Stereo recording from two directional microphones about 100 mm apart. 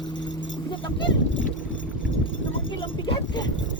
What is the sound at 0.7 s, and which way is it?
Speech, 55° left (ahead or behind).